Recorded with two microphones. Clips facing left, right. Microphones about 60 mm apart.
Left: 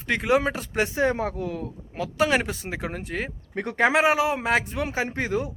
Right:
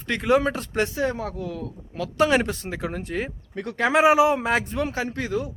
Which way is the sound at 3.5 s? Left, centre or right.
Left.